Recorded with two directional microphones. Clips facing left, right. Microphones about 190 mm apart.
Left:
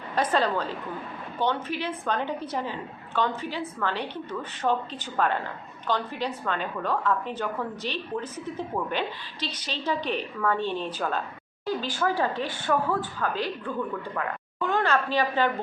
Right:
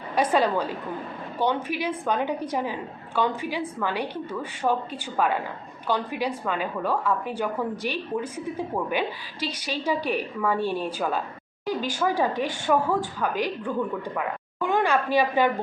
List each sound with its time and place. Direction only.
0.2 s a woman's voice: 10° right (ahead or behind)